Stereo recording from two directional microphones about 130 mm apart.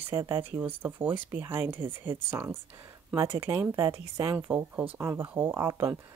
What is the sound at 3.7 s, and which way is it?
Speech, 20° right (ahead or behind).